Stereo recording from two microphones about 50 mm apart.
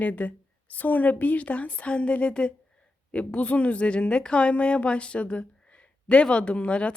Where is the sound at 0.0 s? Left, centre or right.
Left.